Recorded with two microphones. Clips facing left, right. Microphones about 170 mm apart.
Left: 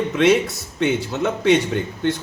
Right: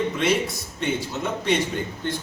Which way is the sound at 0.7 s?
65° left (ahead or behind).